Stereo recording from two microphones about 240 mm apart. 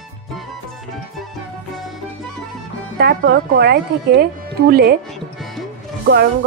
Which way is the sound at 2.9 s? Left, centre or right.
Right.